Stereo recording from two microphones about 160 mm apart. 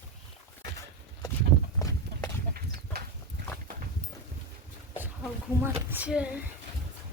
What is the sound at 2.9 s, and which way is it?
Horse, 75° right (ahead or behind).